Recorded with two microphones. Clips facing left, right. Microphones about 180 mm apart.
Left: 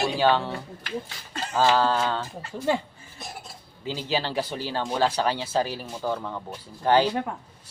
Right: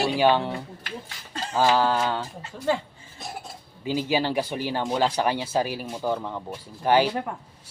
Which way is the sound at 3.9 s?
15° right (ahead or behind).